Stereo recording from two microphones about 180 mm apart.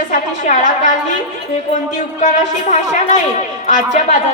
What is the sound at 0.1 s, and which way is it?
Speech, 45° left (ahead or behind).